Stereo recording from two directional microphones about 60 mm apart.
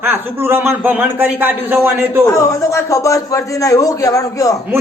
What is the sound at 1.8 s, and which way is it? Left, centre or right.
Speech, right.